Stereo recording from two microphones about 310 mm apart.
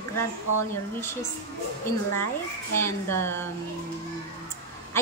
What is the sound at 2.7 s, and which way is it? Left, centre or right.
Speech, centre.